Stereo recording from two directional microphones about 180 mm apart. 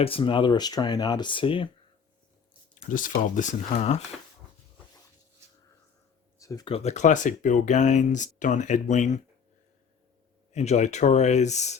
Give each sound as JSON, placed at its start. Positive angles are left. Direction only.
{"t": 0.0, "sound": "speech", "side_deg": 30}
{"t": 2.9, "sound": "speech", "side_deg": 45}
{"t": 6.4, "sound": "a sound", "side_deg": 20}
{"t": 6.7, "sound": "speech", "side_deg": 35}
{"t": 10.5, "sound": "speech", "side_deg": 40}